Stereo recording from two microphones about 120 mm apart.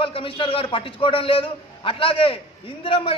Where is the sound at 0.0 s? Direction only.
45° left (ahead or behind).